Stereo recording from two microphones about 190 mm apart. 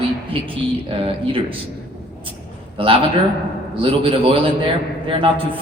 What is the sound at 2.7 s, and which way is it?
A man's voice, 25° right (ahead or behind).